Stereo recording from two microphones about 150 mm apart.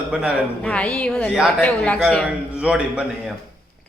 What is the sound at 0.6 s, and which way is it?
A woman's voice, 10° left (ahead or behind).